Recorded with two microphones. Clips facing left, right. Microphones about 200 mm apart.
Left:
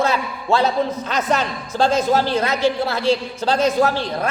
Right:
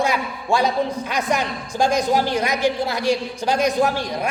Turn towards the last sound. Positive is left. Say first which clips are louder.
# left 2 dB
turn(degrees=-15)  # may be behind; listen again after turning